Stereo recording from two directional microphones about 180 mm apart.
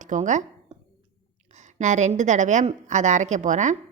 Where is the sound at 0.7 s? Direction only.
35° right (ahead or behind).